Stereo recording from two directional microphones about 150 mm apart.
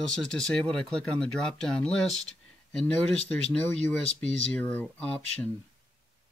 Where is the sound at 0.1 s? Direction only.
5° left (ahead or behind).